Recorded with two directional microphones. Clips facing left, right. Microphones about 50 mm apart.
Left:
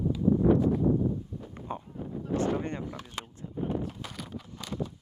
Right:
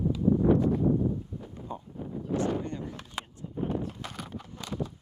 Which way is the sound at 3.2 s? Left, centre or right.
Centre.